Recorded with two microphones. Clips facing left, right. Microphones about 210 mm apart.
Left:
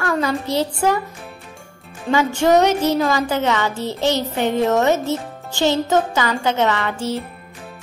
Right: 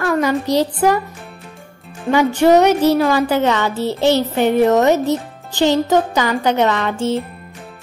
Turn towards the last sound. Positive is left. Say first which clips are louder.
# right 3 dB
turn(degrees=-20)  # may be behind; listen again after turning